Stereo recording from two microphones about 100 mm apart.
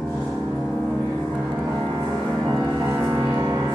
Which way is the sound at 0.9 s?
10° right (ahead or behind).